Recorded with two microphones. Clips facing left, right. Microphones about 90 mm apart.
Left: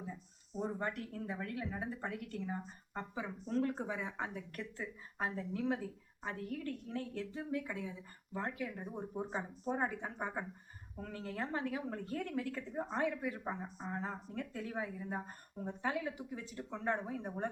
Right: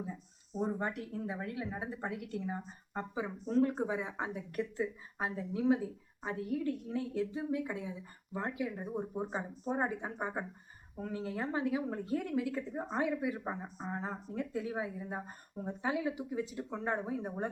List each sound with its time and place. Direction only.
0.6 s a woman's voice: 15° right (ahead or behind)